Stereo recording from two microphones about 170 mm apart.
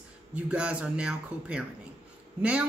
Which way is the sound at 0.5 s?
5° right (ahead or behind).